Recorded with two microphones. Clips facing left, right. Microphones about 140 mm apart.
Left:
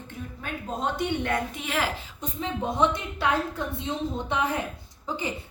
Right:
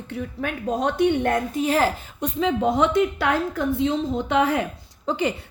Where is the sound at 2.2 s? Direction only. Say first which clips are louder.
Right 9 dB; 90° right.